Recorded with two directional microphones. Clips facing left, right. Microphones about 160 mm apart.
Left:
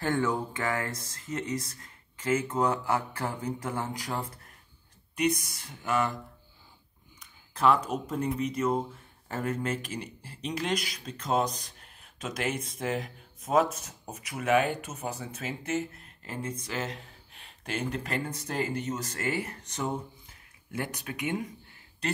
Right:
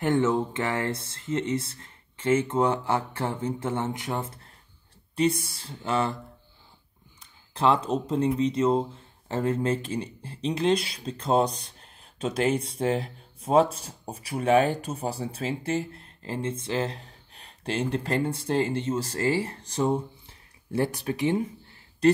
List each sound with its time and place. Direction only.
0.0 s speech: 20° right (ahead or behind)
7.2 s speech: 30° right (ahead or behind)